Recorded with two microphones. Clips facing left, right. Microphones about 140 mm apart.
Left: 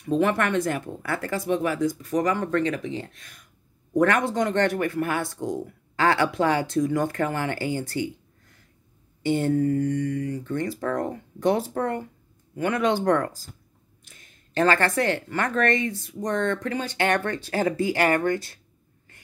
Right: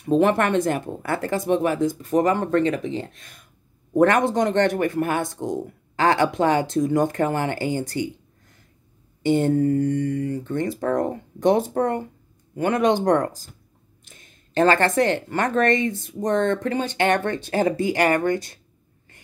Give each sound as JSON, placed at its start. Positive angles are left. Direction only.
{"t": 0.0, "sound": "speech", "side_deg": -30}
{"t": 9.2, "sound": "speech", "side_deg": -25}